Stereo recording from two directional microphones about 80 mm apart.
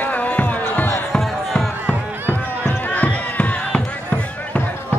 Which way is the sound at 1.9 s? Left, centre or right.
Left.